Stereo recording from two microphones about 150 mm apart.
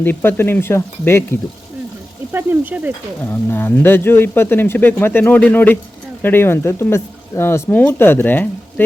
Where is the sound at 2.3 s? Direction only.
15° right (ahead or behind).